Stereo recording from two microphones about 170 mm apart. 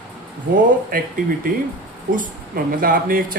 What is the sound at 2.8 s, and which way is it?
Speech, 55° right (ahead or behind).